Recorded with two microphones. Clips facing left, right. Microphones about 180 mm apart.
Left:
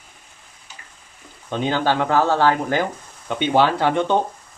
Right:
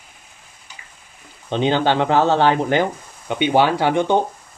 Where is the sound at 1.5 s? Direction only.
25° right (ahead or behind).